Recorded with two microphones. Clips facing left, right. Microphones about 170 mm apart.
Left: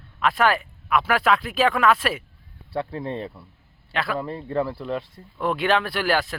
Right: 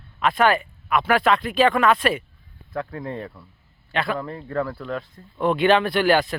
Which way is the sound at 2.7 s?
30° left (ahead or behind).